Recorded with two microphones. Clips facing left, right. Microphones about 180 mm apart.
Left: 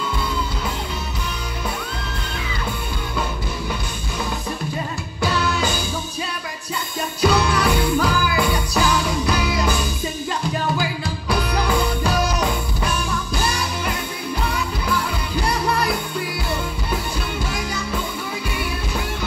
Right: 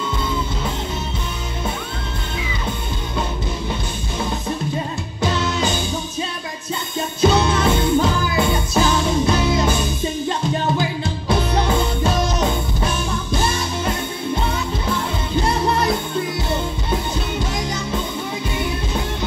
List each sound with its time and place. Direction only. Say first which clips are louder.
5.2 s music: right 1 dB; 20° right (ahead or behind)
7.2 s music: right 2 dB; 25° right (ahead or behind)